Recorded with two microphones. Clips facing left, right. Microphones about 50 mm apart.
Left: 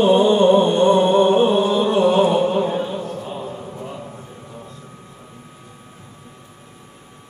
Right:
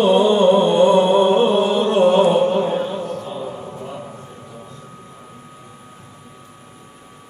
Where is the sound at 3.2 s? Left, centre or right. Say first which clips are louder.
Right 1 dB; left.